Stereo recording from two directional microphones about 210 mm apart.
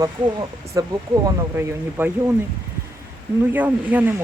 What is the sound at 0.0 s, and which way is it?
Speech, 15° right (ahead or behind).